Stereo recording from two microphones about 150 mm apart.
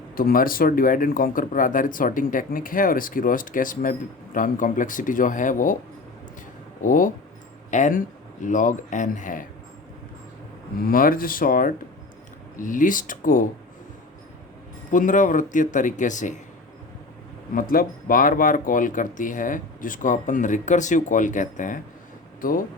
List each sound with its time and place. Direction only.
0.2 s speech: 75° left (ahead or behind)
6.8 s speech: 65° left (ahead or behind)
10.8 s speech: 70° left (ahead or behind)
14.9 s speech: 60° left (ahead or behind)
17.5 s speech: 70° left (ahead or behind)